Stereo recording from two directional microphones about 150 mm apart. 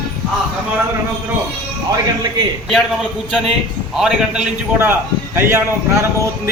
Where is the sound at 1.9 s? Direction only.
30° right (ahead or behind).